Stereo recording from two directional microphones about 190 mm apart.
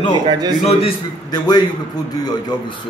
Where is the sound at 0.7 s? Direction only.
30° left (ahead or behind).